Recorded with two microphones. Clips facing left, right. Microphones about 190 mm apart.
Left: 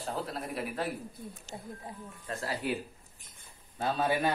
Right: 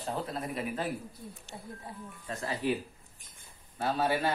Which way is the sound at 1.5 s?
25° left (ahead or behind).